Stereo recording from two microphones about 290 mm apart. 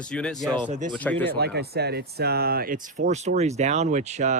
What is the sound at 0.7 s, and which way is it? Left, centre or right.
Speech, right.